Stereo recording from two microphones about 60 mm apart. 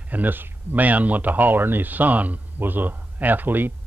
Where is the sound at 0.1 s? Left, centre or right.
Right.